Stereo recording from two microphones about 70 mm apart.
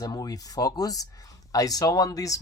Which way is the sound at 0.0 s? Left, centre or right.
Left.